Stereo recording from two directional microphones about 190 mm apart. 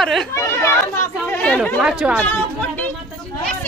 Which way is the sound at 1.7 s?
5° right (ahead or behind).